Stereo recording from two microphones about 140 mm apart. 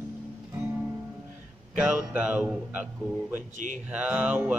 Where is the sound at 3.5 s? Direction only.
65° right (ahead or behind).